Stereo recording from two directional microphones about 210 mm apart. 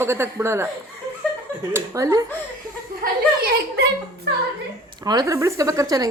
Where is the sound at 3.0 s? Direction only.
45° right (ahead or behind).